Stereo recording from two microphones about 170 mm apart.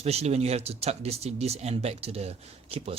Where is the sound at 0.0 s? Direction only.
40° right (ahead or behind).